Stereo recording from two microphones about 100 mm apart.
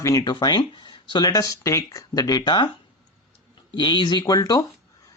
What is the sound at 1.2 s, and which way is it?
Speech, 35° left (ahead or behind).